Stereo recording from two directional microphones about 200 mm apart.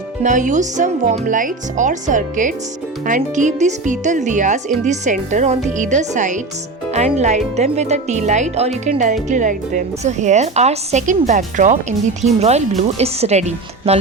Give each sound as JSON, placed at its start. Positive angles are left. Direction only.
{"t": 0.2, "sound": "a woman's voice", "side_deg": -40}